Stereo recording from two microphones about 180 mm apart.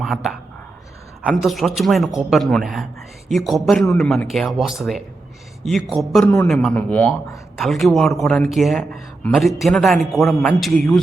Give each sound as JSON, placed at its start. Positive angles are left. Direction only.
{"t": 0.0, "sound": "speech", "side_deg": 0}
{"t": 6.2, "sound": "a man's voice", "side_deg": 15}
{"t": 6.5, "sound": "speech", "side_deg": 0}